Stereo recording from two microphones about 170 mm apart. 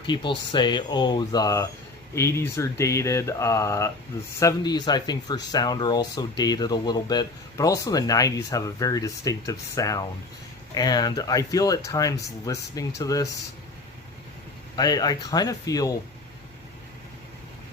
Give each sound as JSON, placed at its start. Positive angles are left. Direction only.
{"t": 0.1, "sound": "speech", "side_deg": 30}
{"t": 14.8, "sound": "speech", "side_deg": 25}